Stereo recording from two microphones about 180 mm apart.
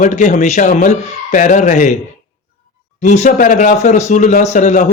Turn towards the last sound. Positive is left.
turn(degrees=45)  # may be behind; listen again after turning